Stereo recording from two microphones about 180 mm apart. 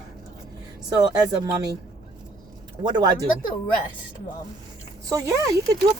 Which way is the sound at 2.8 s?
25° right (ahead or behind).